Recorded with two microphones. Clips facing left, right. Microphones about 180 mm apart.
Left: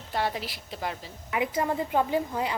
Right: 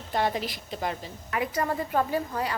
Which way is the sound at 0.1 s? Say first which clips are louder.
Right 3 dB; 5° left (ahead or behind).